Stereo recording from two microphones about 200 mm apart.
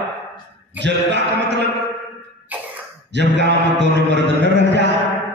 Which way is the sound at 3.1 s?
60° right (ahead or behind).